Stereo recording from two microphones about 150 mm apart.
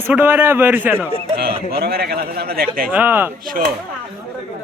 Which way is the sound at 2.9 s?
10° right (ahead or behind).